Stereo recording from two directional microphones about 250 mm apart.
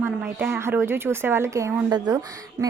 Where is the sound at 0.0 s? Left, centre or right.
Centre.